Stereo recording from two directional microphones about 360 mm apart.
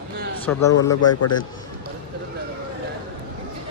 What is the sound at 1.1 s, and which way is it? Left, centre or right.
Speech, left.